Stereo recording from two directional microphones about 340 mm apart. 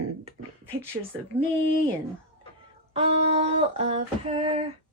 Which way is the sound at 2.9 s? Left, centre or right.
Centre.